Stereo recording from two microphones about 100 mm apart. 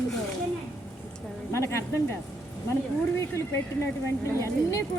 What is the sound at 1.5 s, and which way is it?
Speech, 30° left (ahead or behind).